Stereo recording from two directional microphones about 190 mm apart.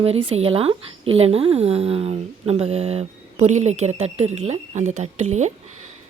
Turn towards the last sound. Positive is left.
turn(degrees=-35)  # may be behind; listen again after turning